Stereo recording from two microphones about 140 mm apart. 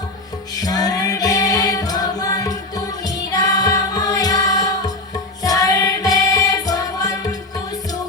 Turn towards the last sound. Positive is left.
turn(degrees=25)  # may be behind; listen again after turning